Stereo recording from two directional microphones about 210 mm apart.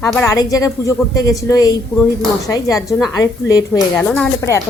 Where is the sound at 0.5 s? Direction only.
15° left (ahead or behind).